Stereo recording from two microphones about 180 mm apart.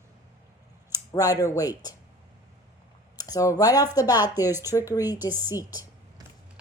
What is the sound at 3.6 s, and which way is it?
Speech, 20° left (ahead or behind).